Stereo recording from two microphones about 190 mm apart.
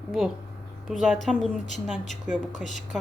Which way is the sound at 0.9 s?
5° right (ahead or behind).